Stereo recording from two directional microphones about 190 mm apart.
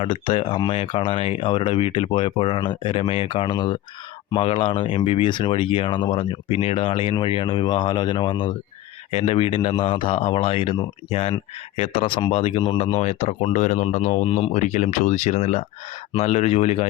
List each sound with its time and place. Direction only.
0.0 s speech: 30° left (ahead or behind)